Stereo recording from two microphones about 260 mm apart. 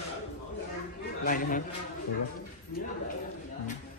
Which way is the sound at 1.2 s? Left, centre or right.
Left.